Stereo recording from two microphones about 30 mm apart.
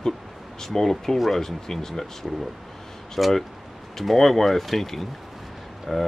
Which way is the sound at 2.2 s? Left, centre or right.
Centre.